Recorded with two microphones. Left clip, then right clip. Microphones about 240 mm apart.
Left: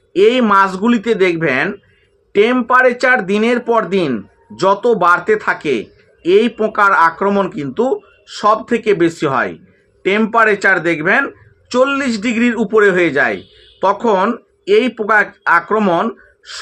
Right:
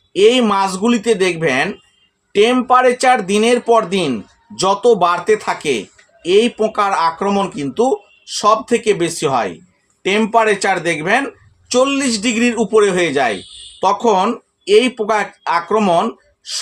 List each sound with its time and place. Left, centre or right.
0.1 s speech: centre